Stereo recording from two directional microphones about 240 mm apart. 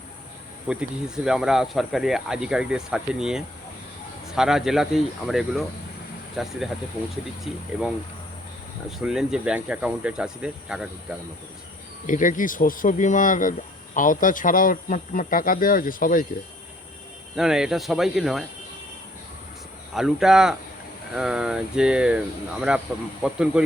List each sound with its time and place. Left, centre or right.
0.7 s speech: centre
9.0 s speech: centre
12.0 s speech: left
17.3 s speech: centre
19.9 s speech: centre